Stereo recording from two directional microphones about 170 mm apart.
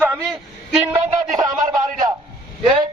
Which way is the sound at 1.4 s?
25° right (ahead or behind).